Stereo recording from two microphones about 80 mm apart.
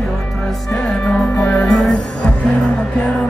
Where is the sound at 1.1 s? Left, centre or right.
Centre.